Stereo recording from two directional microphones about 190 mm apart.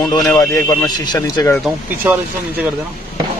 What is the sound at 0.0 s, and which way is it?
A man's voice, 20° left (ahead or behind).